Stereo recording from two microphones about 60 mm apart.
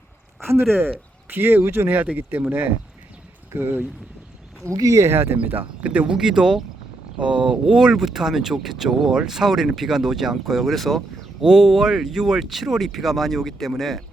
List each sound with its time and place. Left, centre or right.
0.4 s speech: right
4.6 s speech: right
5.1 s speech: right
5.5 s speech: right
6.1 s speech: centre
7.2 s speech: right; by 14.0 s centre